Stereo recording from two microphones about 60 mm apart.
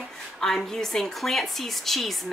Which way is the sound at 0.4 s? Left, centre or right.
Centre.